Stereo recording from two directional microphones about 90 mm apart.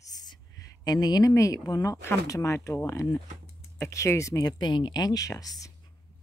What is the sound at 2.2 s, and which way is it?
Speech, 35° left (ahead or behind).